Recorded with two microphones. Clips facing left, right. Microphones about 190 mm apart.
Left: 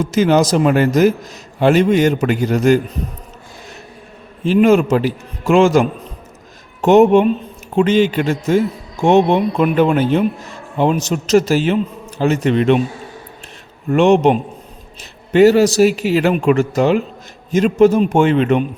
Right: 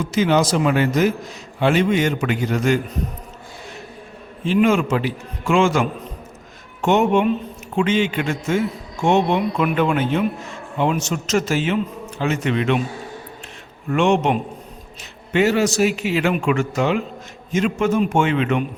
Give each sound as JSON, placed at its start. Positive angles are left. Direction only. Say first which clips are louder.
{"t": 0.0, "sound": "a man's voice", "louder": "left 4 dB", "side_deg": 40}
{"t": 4.4, "sound": "a man's voice", "louder": "left 5 dB", "side_deg": 40}
{"t": 13.9, "sound": "a man's voice", "louder": "left 6 dB", "side_deg": 35}